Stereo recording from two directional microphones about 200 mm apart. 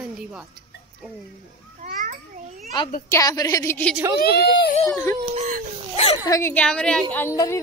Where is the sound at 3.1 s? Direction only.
15° left (ahead or behind).